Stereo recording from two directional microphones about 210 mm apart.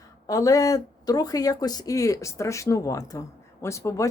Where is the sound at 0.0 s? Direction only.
15° left (ahead or behind).